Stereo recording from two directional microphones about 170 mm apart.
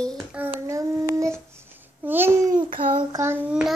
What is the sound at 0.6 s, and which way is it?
Child singing, 20° right (ahead or behind).